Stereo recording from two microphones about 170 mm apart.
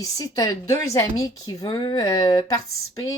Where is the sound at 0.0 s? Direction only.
20° left (ahead or behind).